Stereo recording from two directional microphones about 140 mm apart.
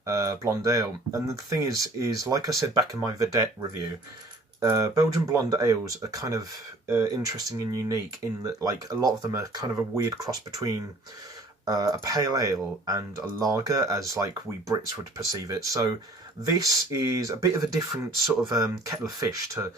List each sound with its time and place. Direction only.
0.0 s speech: 20° right (ahead or behind)
4.6 s speech: 25° right (ahead or behind)
15.3 s speech: 25° right (ahead or behind)
18.2 s speech: centre (ahead or behind)
18.5 s speech: 25° right (ahead or behind)